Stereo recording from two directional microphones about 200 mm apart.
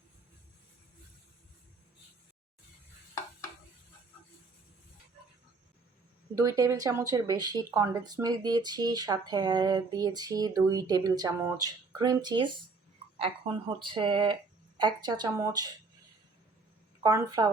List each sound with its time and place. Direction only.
6.3 s speech: 15° right (ahead or behind)
17.0 s speech: 15° right (ahead or behind)